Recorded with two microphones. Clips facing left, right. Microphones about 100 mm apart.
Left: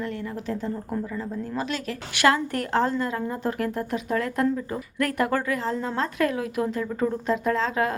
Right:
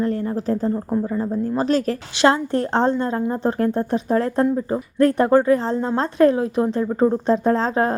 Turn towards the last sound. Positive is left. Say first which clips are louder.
# right 5 dB
turn(degrees=-35)  # may be behind; listen again after turning